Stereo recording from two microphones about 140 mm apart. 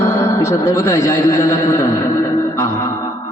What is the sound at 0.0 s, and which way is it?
A man's voice, 20° left (ahead or behind).